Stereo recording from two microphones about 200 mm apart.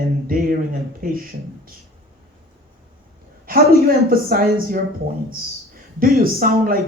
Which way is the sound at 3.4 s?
45° right (ahead or behind).